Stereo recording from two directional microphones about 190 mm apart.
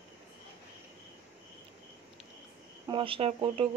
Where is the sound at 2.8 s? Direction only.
30° right (ahead or behind).